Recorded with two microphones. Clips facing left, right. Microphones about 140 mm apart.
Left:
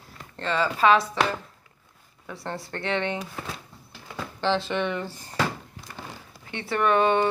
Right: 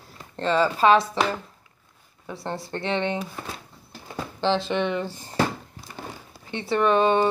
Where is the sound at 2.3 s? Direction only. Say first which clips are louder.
Right 3 dB; 25° right (ahead or behind).